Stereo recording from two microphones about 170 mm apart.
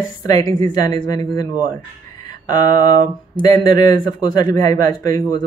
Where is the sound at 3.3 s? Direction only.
20° left (ahead or behind).